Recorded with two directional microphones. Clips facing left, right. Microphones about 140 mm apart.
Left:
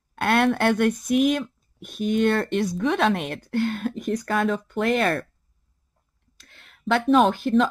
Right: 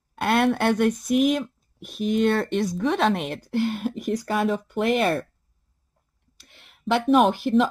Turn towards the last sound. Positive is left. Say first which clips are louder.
# even
turn(degrees=-5)  # may be behind; listen again after turning